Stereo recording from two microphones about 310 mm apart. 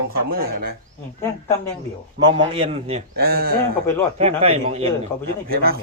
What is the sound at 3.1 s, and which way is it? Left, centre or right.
Speech, right.